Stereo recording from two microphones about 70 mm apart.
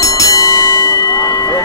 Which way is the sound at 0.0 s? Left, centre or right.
Left.